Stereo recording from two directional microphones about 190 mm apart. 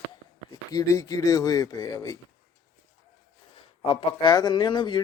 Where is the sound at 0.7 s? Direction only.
15° left (ahead or behind).